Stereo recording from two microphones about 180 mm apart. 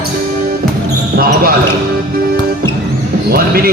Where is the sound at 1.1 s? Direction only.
55° right (ahead or behind).